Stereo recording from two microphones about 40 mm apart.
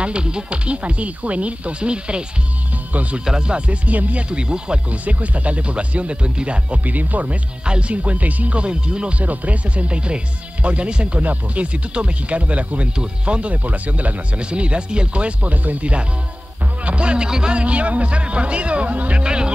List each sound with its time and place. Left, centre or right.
0.0 s speech: right
2.9 s speech: right
3.3 s speech: right
5.0 s speech: right
6.8 s speech: right
7.6 s speech: right
8.0 s speech: right
9.2 s speech: right
12.9 s speech: right
19.2 s speech: right